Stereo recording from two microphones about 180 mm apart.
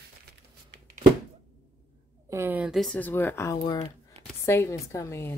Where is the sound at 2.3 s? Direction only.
10° right (ahead or behind).